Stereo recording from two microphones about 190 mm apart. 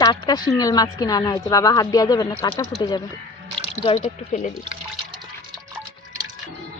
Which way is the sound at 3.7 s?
35° left (ahead or behind).